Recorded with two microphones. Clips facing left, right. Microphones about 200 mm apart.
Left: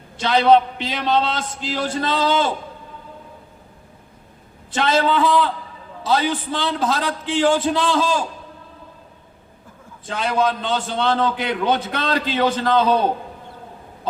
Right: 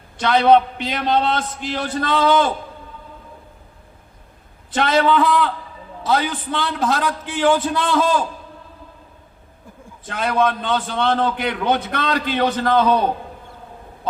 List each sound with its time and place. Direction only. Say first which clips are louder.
0.2 s a man's voice: right 1 dB; 50° right (ahead or behind)
4.7 s a man's voice: right 2 dB; 55° right (ahead or behind)
6.3 s a man's voice: left 1 dB; 30° left (ahead or behind)
6.6 s a man's voice: right 3 dB; 50° right (ahead or behind)
10.1 s a man's voice: right 1 dB; 50° right (ahead or behind)